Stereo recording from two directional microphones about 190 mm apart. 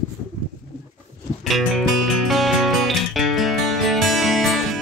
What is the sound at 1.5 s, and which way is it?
Music, centre (ahead or behind).